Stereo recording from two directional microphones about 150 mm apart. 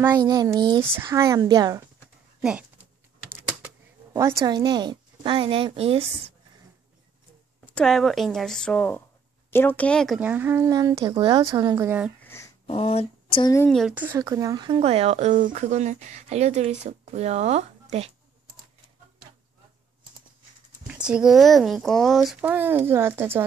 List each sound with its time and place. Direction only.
0.1 s a woman's voice: 25° right (ahead or behind)
2.4 s typing: 10° right (ahead or behind)
4.1 s a woman's voice: 20° right (ahead or behind); by 6.0 s 40° right (ahead or behind)
7.6 s speech: 5° left (ahead or behind)
10.2 s a woman's voice: 15° right (ahead or behind)
12.2 s a sound: 15° left (ahead or behind)
12.6 s speech: 40° left (ahead or behind)
13.7 s speech: centre (ahead or behind)
13.9 s speech: 15° right (ahead or behind); by 18.1 s 45° right (ahead or behind)
20.8 s speech: 5° right (ahead or behind)